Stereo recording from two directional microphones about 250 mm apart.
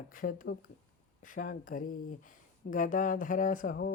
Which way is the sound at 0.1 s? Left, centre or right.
Left.